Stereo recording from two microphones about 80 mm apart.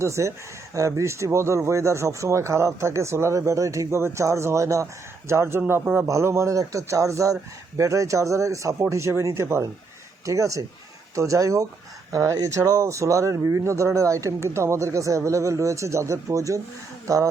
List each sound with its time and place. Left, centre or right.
0.0 s speech: right